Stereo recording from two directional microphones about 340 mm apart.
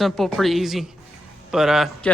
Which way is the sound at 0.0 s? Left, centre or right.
Centre.